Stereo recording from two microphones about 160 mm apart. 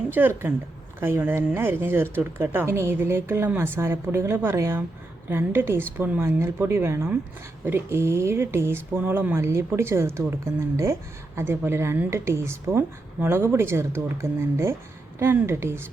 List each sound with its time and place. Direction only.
0.1 s speech: 10° right (ahead or behind)